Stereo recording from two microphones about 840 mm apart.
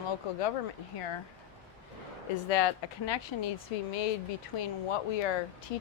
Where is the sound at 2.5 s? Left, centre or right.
Left.